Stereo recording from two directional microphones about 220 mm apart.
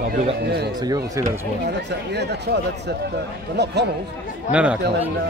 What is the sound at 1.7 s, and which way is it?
Speech, 50° right (ahead or behind).